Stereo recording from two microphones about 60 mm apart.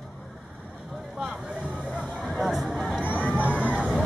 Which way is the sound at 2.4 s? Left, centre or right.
Centre.